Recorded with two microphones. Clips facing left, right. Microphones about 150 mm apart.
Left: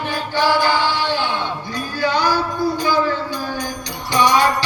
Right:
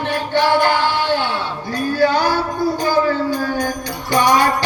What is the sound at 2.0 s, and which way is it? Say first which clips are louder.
Music: right 3 dB; 50° right (ahead or behind).